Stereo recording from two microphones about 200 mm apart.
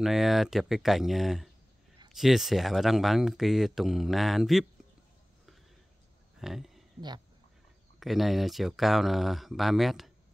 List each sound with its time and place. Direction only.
0.0 s speech: centre (ahead or behind)
6.4 s speech: centre (ahead or behind)
8.0 s speech: centre (ahead or behind)